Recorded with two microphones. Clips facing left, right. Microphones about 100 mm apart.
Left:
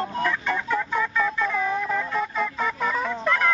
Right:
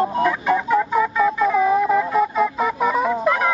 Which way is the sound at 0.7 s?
5° right (ahead or behind).